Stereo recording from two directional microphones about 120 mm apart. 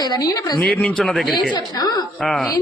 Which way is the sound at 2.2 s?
Centre (ahead or behind).